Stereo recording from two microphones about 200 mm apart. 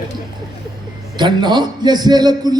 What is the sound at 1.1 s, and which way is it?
Speech, 20° right (ahead or behind).